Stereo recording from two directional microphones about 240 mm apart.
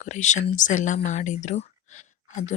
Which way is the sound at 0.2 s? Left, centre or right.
Left.